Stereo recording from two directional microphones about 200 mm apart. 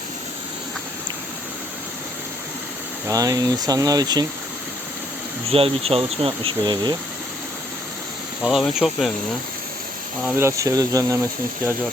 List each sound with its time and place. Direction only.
3.1 s speech: 15° right (ahead or behind)
5.5 s speech: 30° right (ahead or behind)
8.4 s speech: centre (ahead or behind)
10.2 s speech: 15° right (ahead or behind)